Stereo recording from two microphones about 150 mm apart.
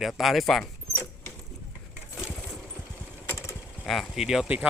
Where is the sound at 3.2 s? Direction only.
20° left (ahead or behind).